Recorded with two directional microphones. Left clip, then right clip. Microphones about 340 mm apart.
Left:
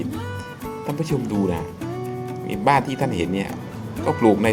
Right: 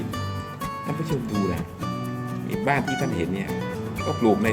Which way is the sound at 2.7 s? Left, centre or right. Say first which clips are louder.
Left 6 dB; centre.